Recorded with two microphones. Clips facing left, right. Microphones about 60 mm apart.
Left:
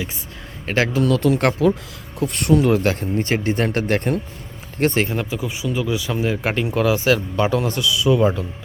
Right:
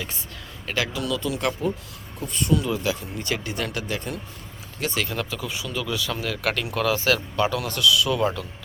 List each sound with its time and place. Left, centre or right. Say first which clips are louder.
0.6 s speech: left 8 dB; left
2.1 s speech: left 7 dB; left
3.2 s speech: left 8 dB; left
5.0 s speech: left 5 dB; left